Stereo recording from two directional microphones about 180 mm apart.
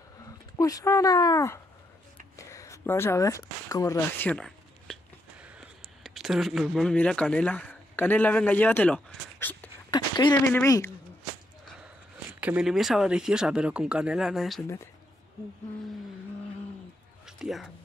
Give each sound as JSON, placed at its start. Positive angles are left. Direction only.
{"t": 0.6, "sound": "speech", "side_deg": 20}
{"t": 2.3, "sound": "a sound", "side_deg": 15}
{"t": 9.8, "sound": "a sound", "side_deg": 25}
{"t": 10.5, "sound": "a woman's voice", "side_deg": 15}
{"t": 12.3, "sound": "speech", "side_deg": -10}
{"t": 17.4, "sound": "speech", "side_deg": 0}